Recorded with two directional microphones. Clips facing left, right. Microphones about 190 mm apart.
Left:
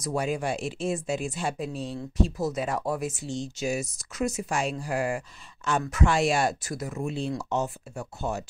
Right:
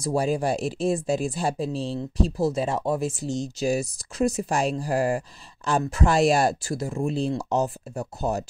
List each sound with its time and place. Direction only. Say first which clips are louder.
0.0 s speech: right 4 dB; 35° right (ahead or behind)